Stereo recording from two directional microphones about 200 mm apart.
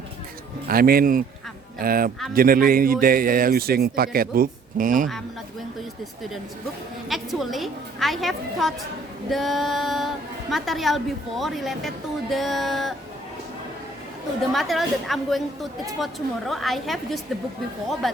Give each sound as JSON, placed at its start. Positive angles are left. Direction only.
{"t": 0.7, "sound": "a man's voice", "side_deg": -50}
{"t": 7.1, "sound": "a woman's voice", "side_deg": 0}
{"t": 14.5, "sound": "a woman's voice", "side_deg": 0}
{"t": 16.5, "sound": "a woman's voice", "side_deg": 0}